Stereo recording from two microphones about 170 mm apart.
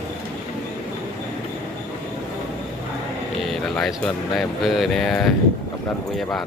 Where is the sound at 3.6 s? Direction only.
Centre (ahead or behind).